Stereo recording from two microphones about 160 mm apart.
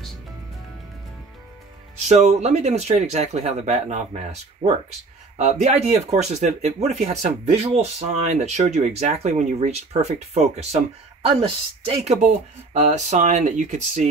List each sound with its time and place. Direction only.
2.0 s speech: 45° right (ahead or behind)